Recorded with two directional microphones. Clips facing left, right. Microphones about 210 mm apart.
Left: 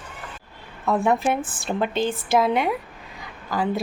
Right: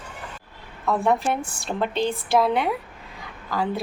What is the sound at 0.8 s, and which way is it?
A woman's voice, centre (ahead or behind).